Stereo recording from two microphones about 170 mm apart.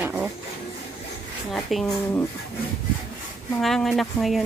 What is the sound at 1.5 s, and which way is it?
Speech, centre (ahead or behind).